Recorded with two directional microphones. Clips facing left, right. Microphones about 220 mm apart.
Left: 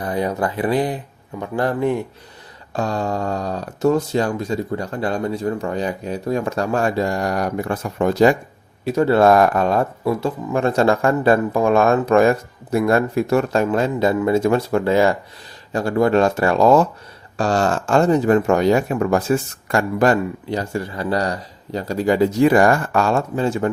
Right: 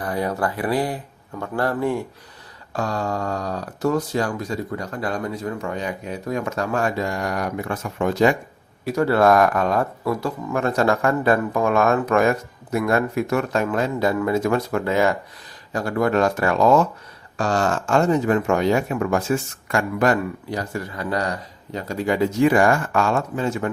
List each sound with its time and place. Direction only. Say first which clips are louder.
0.0 s a man's voice: left 2 dB; 20° left (ahead or behind); by 8.4 s 35° left (ahead or behind)
8.8 s speech: left 3 dB; 25° left (ahead or behind)